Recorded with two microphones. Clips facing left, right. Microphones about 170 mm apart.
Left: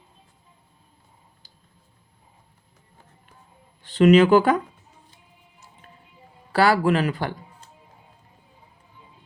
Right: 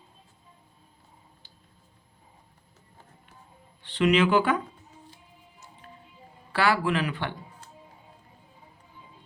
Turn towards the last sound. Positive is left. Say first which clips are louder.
# left 6 dB
turn(degrees=40)  # may be behind; listen again after turning